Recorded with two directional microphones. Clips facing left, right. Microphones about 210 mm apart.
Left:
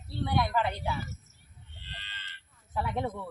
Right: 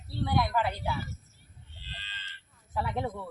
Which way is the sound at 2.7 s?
Centre (ahead or behind).